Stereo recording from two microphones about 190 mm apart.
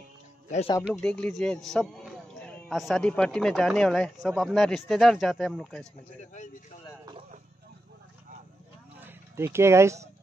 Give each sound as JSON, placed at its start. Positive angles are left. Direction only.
{"t": 0.5, "sound": "speech", "side_deg": 35}
{"t": 1.0, "sound": "a man's voice", "side_deg": 5}
{"t": 6.3, "sound": "speech", "side_deg": 40}
{"t": 9.0, "sound": "speech", "side_deg": -15}